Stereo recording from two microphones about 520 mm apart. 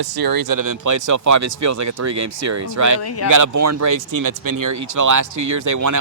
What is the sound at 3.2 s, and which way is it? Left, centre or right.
Speech, right.